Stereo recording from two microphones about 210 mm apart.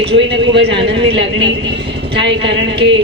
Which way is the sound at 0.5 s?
55° right (ahead or behind).